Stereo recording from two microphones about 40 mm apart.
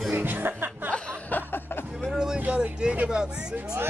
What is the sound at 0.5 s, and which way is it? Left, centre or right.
Music, right.